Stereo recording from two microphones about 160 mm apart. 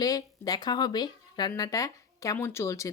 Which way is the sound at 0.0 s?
25° left (ahead or behind).